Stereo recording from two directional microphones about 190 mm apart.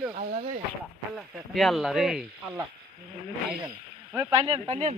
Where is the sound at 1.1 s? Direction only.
Centre (ahead or behind).